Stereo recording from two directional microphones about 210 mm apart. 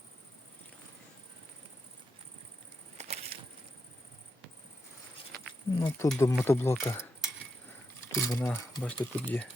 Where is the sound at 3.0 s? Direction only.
30° right (ahead or behind).